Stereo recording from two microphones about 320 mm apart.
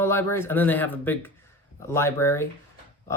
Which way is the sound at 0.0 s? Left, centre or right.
Centre.